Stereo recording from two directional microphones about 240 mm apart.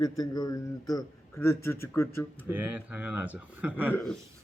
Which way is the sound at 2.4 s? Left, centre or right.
Centre.